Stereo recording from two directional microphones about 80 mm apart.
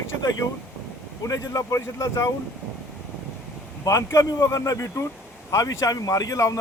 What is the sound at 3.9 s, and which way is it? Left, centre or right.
Speech, left.